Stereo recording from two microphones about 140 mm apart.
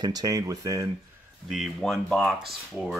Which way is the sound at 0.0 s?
25° right (ahead or behind).